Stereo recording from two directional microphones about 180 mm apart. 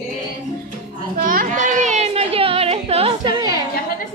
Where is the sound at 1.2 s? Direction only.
50° right (ahead or behind); by 3.3 s 35° right (ahead or behind).